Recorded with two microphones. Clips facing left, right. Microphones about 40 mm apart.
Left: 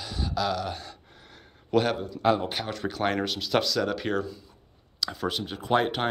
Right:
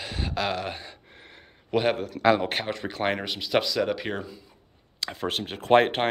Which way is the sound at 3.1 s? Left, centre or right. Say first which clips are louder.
Even; centre.